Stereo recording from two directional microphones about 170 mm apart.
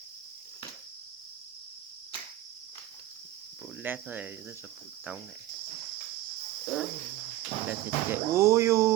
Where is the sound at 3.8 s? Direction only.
10° right (ahead or behind).